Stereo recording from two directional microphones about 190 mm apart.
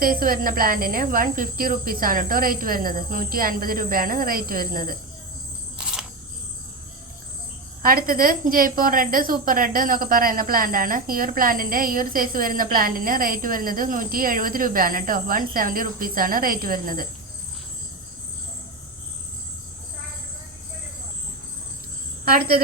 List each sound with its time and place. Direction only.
0.0 s a woman's voice: 50° right (ahead or behind)
5.7 s a sound: 5° right (ahead or behind)
7.8 s a woman's voice: 50° right (ahead or behind)
22.2 s a woman's voice: 55° right (ahead or behind)